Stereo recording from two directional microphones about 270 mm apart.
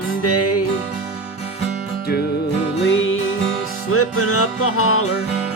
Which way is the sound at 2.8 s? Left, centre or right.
Left.